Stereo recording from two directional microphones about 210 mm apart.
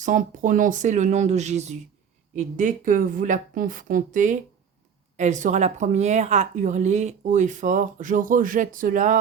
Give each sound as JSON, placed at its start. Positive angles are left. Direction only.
{"t": 0.0, "sound": "speech", "side_deg": -35}